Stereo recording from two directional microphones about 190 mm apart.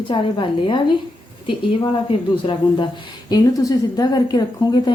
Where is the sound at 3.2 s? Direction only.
20° left (ahead or behind).